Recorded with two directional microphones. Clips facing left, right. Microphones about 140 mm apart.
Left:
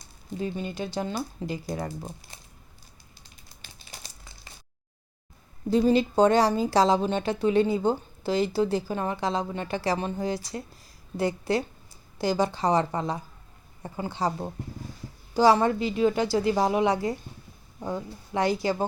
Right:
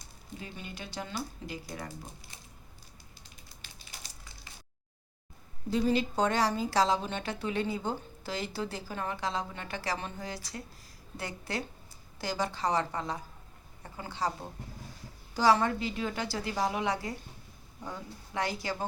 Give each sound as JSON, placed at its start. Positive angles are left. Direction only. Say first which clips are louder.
{"t": 0.3, "sound": "speech", "louder": "left 12 dB", "side_deg": 30}
{"t": 5.7, "sound": "speech", "louder": "left 7 dB", "side_deg": 30}